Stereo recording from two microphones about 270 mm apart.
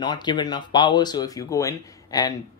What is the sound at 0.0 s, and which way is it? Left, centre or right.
Speech, centre.